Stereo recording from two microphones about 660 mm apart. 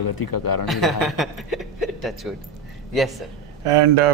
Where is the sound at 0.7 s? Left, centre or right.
Centre.